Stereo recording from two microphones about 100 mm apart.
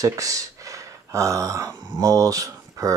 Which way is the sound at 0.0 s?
35° right (ahead or behind).